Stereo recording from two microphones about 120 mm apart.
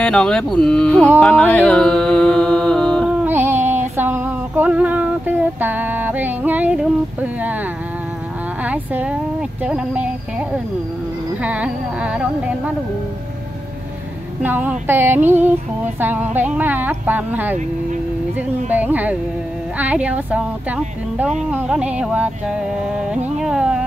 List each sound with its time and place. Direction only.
0.0 s speech: 5° left (ahead or behind)
1.2 s music: 10° left (ahead or behind)
3.3 s a sound: 20° right (ahead or behind)
8.6 s speech: 15° right (ahead or behind)
11.4 s a woman's voice: 10° right (ahead or behind)
14.4 s a woman's voice: 15° right (ahead or behind)
18.7 s a woman's voice: 15° right (ahead or behind)